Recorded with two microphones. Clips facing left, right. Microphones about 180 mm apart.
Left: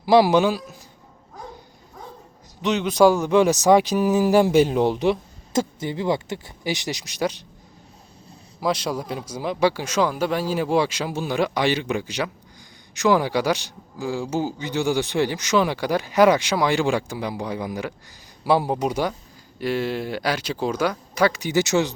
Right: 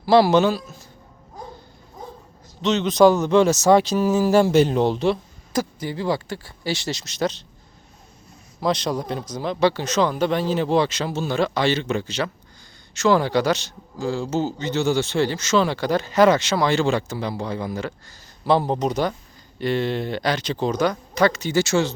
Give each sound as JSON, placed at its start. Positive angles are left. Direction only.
{"t": 0.0, "sound": "speech", "side_deg": 15}
{"t": 2.6, "sound": "speech", "side_deg": 10}
{"t": 8.6, "sound": "speech", "side_deg": 5}